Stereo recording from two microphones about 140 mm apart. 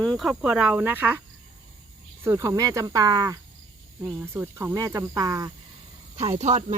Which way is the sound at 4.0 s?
15° right (ahead or behind).